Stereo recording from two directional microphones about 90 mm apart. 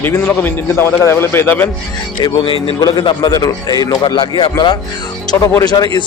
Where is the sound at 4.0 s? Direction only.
60° left (ahead or behind).